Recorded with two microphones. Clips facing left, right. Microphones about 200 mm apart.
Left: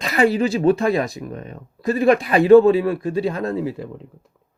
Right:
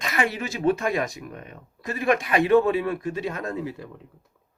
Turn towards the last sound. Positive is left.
turn(degrees=25)  # may be behind; listen again after turning